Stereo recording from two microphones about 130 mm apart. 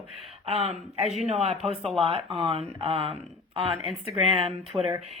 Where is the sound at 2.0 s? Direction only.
45° right (ahead or behind).